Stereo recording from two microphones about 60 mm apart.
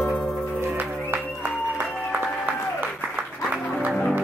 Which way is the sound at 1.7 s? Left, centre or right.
Right.